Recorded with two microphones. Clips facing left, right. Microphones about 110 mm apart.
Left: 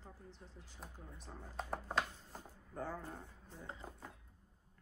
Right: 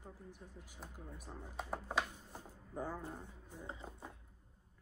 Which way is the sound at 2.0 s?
15° right (ahead or behind).